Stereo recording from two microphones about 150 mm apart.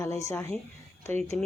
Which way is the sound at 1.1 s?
45° right (ahead or behind).